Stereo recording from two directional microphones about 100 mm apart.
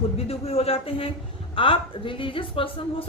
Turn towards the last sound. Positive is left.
turn(degrees=65)  # may be behind; listen again after turning